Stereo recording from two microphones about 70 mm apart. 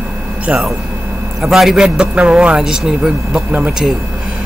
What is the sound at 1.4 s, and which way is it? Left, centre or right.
Speech, centre.